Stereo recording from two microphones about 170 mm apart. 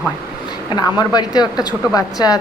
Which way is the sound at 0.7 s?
25° left (ahead or behind).